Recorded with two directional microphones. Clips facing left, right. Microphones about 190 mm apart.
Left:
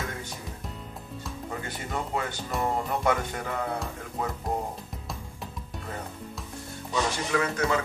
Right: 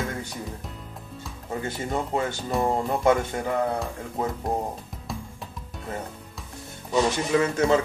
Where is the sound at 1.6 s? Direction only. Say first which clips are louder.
Right 7 dB; 25° right (ahead or behind).